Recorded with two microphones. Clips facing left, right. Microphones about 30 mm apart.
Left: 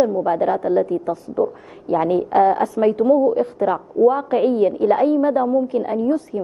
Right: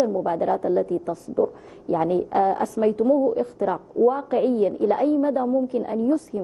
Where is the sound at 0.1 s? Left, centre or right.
Left.